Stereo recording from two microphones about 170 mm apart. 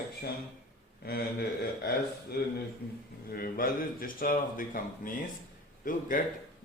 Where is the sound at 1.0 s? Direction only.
65° left (ahead or behind).